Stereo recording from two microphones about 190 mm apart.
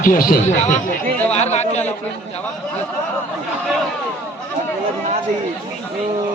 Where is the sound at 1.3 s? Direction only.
35° left (ahead or behind).